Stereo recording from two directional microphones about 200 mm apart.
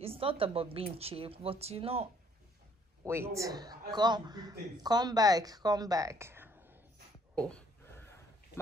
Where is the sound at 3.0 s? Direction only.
10° right (ahead or behind).